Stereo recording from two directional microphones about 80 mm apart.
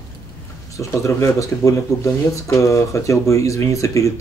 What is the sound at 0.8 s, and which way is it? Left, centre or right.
Speech, left.